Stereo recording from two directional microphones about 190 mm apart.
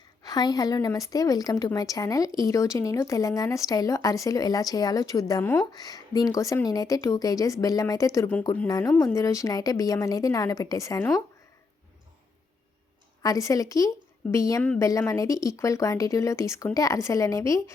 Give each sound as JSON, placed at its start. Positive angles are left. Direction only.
{"t": 0.2, "sound": "a woman's voice", "side_deg": 20}
{"t": 13.2, "sound": "speech", "side_deg": 15}